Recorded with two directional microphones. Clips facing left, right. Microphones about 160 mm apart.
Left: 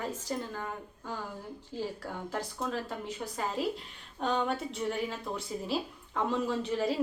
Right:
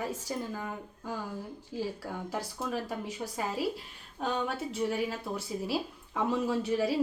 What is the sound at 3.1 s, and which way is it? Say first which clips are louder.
A woman's voice: right 1 dB; 10° right (ahead or behind).